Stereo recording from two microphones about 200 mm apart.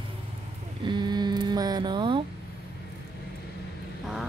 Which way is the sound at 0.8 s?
20° right (ahead or behind).